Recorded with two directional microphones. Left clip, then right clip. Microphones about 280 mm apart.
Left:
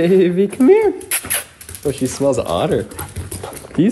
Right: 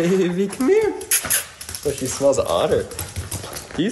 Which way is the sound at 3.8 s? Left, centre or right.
Centre.